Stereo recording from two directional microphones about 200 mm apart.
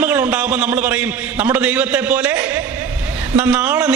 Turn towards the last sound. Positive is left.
turn(degrees=-5)  # may be behind; listen again after turning